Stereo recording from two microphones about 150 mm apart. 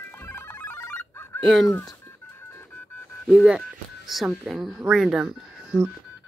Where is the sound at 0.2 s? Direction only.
15° left (ahead or behind).